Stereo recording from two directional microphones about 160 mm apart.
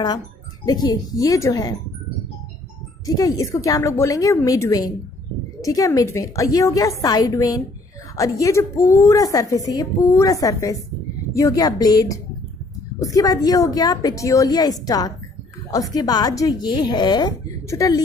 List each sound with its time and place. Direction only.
0.7 s a woman's voice: 25° left (ahead or behind)
3.1 s a woman's voice: 20° left (ahead or behind)